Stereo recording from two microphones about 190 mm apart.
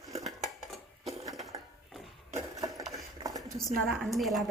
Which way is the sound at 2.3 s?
20° right (ahead or behind).